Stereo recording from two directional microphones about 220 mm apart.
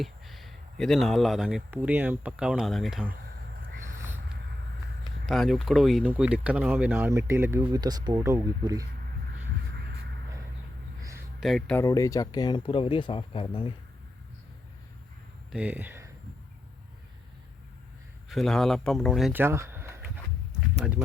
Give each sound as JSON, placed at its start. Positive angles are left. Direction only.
{"t": 0.0, "sound": "speech", "side_deg": 0}
{"t": 3.7, "sound": "a sound", "side_deg": -35}
{"t": 3.9, "sound": "a sound", "side_deg": -10}
{"t": 5.2, "sound": "speech", "side_deg": 0}
{"t": 11.3, "sound": "speech", "side_deg": 0}
{"t": 11.8, "sound": "speech", "side_deg": 15}
{"t": 15.5, "sound": "speech", "side_deg": -5}
{"t": 18.3, "sound": "speech", "side_deg": 0}